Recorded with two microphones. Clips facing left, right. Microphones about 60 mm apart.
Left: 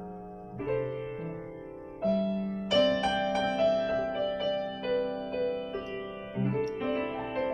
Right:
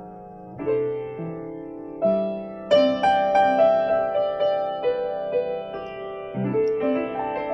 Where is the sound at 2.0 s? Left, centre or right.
Right.